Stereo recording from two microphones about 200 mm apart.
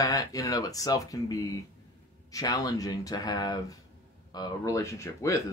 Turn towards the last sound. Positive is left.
turn(degrees=15)  # may be behind; listen again after turning